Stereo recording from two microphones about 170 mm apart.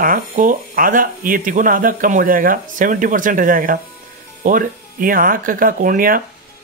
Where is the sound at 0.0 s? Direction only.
55° right (ahead or behind).